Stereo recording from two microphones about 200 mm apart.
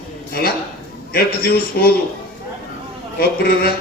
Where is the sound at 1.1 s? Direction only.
50° left (ahead or behind).